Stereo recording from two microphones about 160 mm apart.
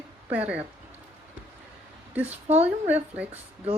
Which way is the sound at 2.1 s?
10° right (ahead or behind).